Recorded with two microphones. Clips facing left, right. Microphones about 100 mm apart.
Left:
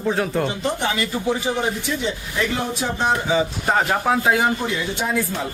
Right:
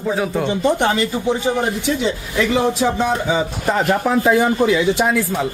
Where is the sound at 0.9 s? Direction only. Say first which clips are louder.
Right 4 dB; 25° right (ahead or behind).